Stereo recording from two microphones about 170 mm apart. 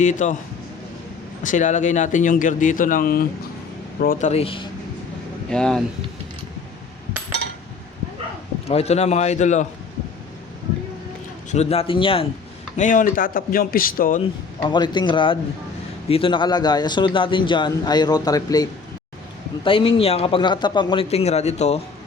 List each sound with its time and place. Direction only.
0.0 s speech: 45° left (ahead or behind)
1.5 s speech: 45° left (ahead or behind)
4.3 s a man's voice: 35° left (ahead or behind)
5.5 s speech: 5° left (ahead or behind)
8.6 s a man's voice: 40° left (ahead or behind)
11.5 s a man's voice: 40° left (ahead or behind)
12.7 s speech: 50° left (ahead or behind)
14.6 s a man's voice: 25° left (ahead or behind)
19.6 s a man's voice: 30° left (ahead or behind)